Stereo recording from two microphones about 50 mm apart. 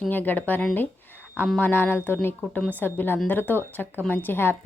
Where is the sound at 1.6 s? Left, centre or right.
Left.